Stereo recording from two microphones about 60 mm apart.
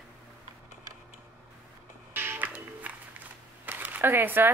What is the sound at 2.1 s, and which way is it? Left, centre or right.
Music, right.